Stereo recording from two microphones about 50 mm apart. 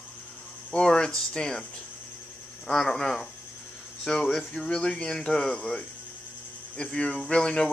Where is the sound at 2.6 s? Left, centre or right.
Centre.